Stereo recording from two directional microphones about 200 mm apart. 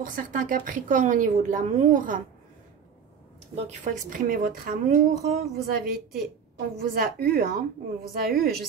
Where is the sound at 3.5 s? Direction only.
35° right (ahead or behind).